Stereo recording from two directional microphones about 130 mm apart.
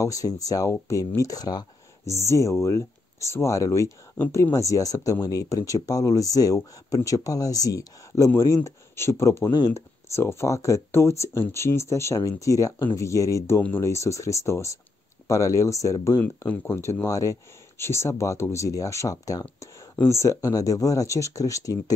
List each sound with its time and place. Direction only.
0.0 s speech: 25° left (ahead or behind)
16.2 s speech: 15° left (ahead or behind)